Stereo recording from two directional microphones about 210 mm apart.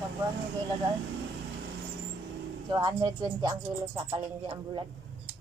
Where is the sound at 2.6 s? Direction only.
20° right (ahead or behind).